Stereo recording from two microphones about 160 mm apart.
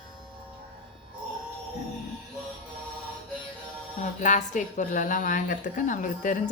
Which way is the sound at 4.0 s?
50° left (ahead or behind).